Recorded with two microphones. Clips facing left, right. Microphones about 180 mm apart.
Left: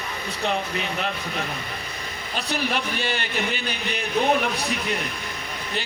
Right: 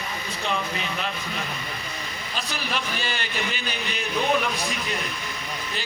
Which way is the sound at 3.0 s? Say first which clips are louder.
Left 3 dB; 60° left (ahead or behind).